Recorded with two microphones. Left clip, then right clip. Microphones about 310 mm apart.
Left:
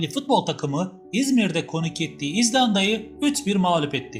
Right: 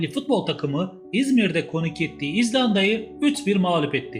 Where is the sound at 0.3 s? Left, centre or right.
Left.